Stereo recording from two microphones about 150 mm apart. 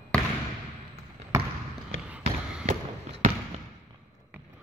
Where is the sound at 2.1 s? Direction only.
5° right (ahead or behind).